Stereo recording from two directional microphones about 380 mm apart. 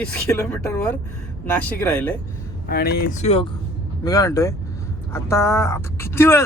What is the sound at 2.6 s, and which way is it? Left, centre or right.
Speech, left.